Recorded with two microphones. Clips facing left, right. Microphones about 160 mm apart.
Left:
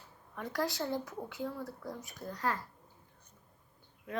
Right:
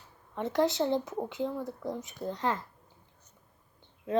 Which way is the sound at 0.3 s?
25° right (ahead or behind).